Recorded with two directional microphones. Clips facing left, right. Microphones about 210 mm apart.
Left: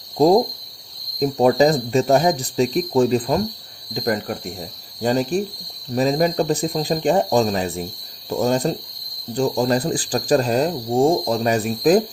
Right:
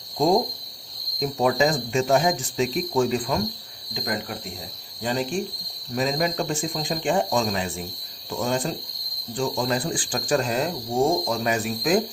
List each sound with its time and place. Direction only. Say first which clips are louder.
1.2 s speech: left 6 dB; 35° left (ahead or behind)